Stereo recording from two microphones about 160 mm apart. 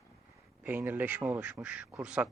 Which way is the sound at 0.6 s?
10° right (ahead or behind).